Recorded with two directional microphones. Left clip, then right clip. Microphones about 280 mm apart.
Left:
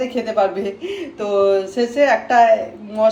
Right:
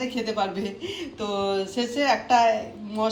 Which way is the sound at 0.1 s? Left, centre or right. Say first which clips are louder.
Left 9 dB; centre.